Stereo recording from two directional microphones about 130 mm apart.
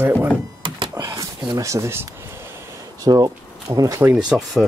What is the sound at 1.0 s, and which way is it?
Speech, 25° right (ahead or behind).